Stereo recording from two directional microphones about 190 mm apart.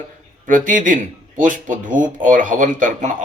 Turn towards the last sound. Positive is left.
turn(degrees=-40)  # may be behind; listen again after turning